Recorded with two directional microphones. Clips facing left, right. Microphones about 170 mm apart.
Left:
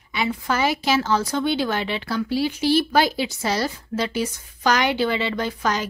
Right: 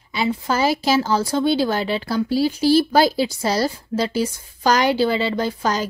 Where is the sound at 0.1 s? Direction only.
30° right (ahead or behind).